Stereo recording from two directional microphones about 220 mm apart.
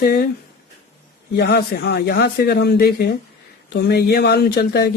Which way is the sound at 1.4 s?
50° left (ahead or behind).